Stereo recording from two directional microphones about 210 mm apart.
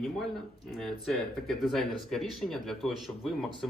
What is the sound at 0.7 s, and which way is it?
Speech, centre (ahead or behind).